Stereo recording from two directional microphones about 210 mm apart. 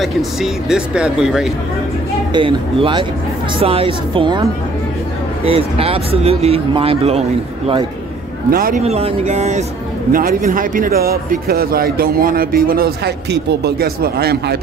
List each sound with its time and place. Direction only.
0.0 s speech: centre (ahead or behind)
2.3 s speech: 25° right (ahead or behind)
8.5 s speech: 45° right (ahead or behind)
8.8 s speech: 30° right (ahead or behind); by 14.6 s 50° right (ahead or behind)